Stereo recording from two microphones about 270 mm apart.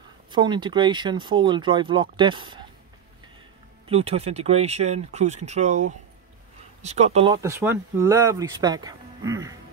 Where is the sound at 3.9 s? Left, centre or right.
Right.